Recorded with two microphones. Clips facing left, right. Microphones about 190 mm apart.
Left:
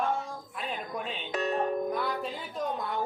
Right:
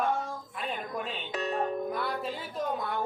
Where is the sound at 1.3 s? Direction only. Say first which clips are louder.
Left 4 dB; 50° left (ahead or behind).